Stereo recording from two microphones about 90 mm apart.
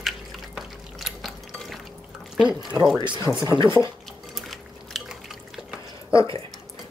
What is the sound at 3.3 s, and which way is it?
Speech, 15° right (ahead or behind).